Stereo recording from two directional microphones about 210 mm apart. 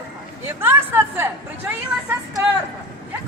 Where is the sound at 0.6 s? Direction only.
10° right (ahead or behind).